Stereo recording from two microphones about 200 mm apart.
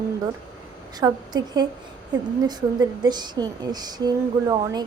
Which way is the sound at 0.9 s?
20° right (ahead or behind).